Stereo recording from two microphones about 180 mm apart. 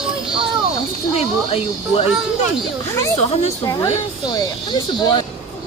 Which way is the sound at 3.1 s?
35° left (ahead or behind).